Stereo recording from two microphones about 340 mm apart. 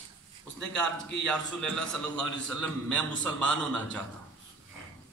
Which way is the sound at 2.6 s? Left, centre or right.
Centre.